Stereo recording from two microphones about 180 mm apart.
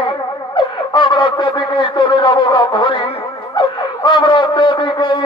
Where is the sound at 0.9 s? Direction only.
25° left (ahead or behind).